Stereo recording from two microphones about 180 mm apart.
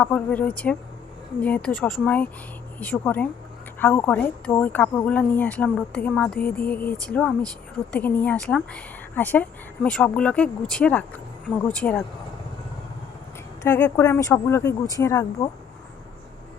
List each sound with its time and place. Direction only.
0.0 s speech: 10° left (ahead or behind)
13.6 s speech: 10° left (ahead or behind)